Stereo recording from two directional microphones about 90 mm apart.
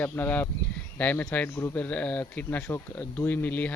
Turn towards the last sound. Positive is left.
turn(degrees=20)  # may be behind; listen again after turning